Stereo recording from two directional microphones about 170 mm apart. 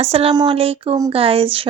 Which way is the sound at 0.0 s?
35° right (ahead or behind).